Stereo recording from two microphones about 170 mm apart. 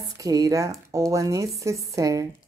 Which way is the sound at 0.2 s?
20° right (ahead or behind).